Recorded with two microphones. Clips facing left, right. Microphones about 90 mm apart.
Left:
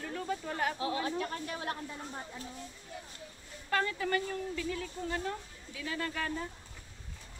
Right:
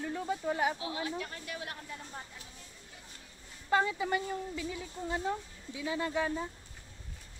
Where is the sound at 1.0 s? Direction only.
40° left (ahead or behind).